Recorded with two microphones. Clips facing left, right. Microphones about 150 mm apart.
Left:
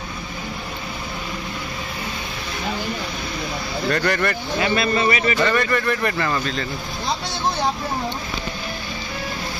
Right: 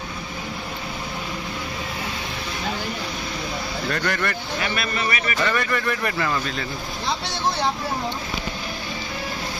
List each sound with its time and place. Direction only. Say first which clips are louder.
3.9 s speech: left 5 dB; centre (ahead or behind)
4.6 s a man's voice: left 9 dB; 25° left (ahead or behind)
5.5 s speech: left 3 dB; 5° right (ahead or behind)